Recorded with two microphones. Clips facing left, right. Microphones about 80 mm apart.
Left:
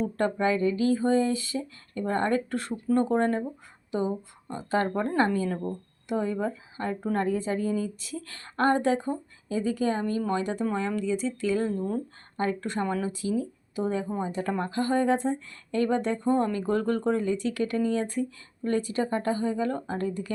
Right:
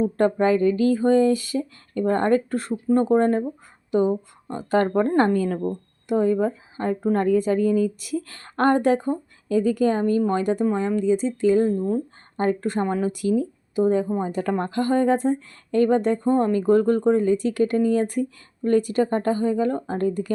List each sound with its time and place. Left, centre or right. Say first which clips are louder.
0.0 s speech: right 6 dB; right
10.8 s speech: right 7 dB; right
14.5 s speech: right 4 dB; right
17.9 s speech: right 6 dB; right